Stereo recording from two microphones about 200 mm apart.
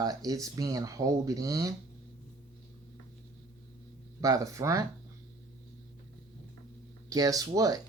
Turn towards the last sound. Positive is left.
turn(degrees=-15)  # may be behind; listen again after turning